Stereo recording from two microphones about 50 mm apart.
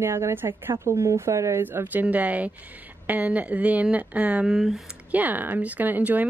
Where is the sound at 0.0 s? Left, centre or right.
Right.